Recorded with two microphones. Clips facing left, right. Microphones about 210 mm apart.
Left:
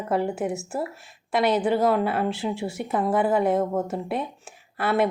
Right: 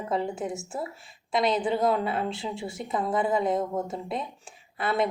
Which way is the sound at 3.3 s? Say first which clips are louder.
Left 4 dB; 65° left (ahead or behind).